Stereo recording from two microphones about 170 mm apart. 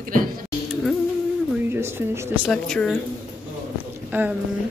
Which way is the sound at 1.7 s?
15° right (ahead or behind).